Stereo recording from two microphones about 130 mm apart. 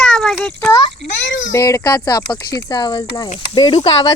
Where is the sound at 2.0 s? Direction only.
30° left (ahead or behind).